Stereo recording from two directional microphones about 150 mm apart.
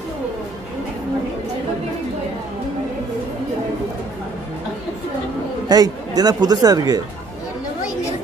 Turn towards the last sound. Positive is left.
turn(degrees=-25)  # may be behind; listen again after turning